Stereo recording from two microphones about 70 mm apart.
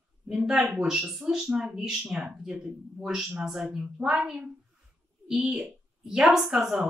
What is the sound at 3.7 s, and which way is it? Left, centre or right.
Speech, centre.